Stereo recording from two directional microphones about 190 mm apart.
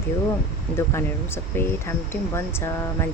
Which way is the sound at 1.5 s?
10° left (ahead or behind).